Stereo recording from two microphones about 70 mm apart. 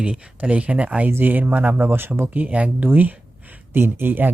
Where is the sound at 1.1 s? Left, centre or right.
Right.